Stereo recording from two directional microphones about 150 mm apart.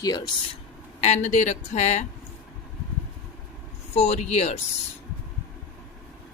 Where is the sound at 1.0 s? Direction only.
50° left (ahead or behind).